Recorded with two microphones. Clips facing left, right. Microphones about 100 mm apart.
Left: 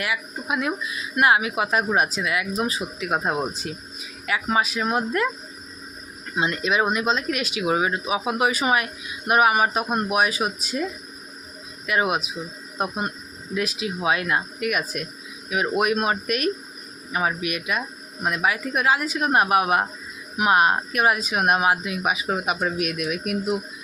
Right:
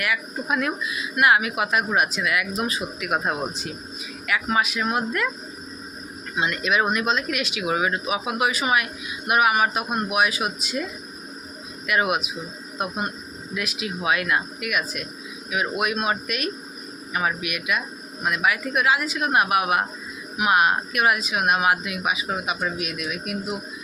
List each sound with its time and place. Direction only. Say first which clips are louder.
0.4 s speech: right 1 dB; 15° left (ahead or behind)
0.9 s speech: even; 30° left (ahead or behind)
6.3 s speech: even; 30° left (ahead or behind)
11.9 s speech: even; 30° left (ahead or behind)
17.1 s speech: left 1 dB; 30° left (ahead or behind)
22.4 s speech: left 3 dB; 50° left (ahead or behind)